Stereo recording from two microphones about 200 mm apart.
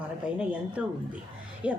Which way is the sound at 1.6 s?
5° right (ahead or behind).